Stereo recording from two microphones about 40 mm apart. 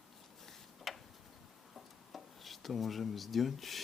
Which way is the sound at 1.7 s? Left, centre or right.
Centre.